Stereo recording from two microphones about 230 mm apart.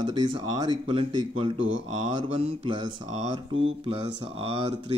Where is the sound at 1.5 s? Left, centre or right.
Right.